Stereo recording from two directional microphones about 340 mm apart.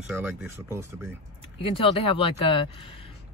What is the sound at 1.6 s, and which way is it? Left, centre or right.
Speech, centre.